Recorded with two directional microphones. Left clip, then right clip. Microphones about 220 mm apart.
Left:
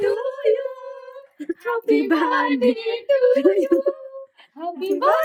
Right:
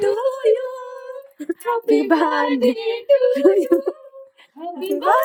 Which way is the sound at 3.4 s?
25° right (ahead or behind).